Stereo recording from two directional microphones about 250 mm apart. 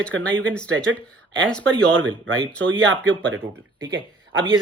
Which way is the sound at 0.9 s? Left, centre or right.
Right.